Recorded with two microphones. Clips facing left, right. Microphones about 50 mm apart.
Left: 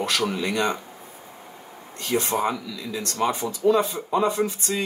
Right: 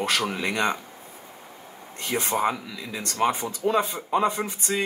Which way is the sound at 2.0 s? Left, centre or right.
Right.